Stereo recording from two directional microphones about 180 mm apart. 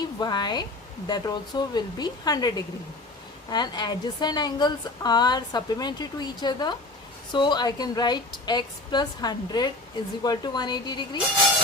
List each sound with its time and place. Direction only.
0.0 s a woman's voice: 25° left (ahead or behind)